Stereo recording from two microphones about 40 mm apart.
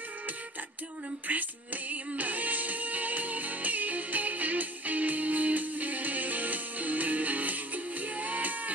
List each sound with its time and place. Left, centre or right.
1.3 s music: right